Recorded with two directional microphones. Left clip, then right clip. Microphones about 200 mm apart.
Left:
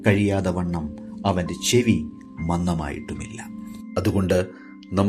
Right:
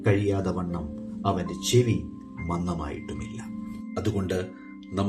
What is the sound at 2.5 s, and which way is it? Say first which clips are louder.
Speech: left 5 dB; 50° left (ahead or behind).